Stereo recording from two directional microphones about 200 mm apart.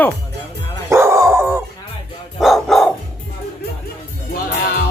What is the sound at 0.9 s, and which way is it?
Dog, 15° right (ahead or behind).